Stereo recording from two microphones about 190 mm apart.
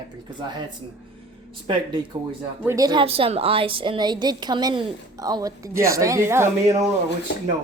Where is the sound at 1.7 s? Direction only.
25° right (ahead or behind).